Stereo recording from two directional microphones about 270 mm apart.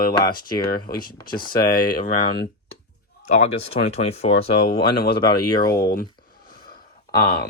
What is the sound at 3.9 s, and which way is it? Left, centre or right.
Speech, left.